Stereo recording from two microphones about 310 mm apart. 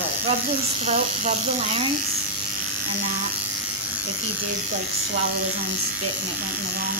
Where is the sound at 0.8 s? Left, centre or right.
Right.